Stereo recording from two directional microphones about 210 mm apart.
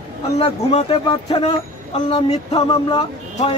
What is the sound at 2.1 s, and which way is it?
Speech, 25° left (ahead or behind).